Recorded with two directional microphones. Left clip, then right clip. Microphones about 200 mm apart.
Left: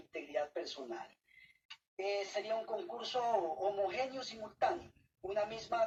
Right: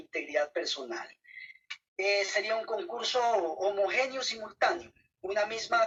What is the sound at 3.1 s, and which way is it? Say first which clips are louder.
Speech: right 6 dB; 40° right (ahead or behind).